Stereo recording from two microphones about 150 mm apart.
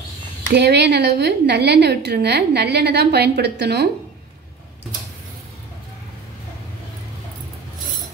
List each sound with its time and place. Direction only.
0.6 s a woman's voice: 90° right